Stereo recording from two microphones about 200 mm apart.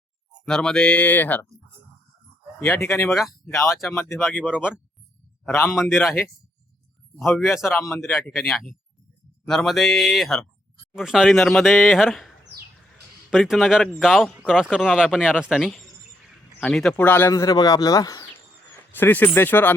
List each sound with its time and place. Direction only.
0.4 s speech: 5° left (ahead or behind)
2.6 s speech: 10° left (ahead or behind)
3.1 s speech: centre (ahead or behind)
7.9 s speech: 15° left (ahead or behind)
8.1 s speech: centre (ahead or behind)
13.3 s speech: centre (ahead or behind)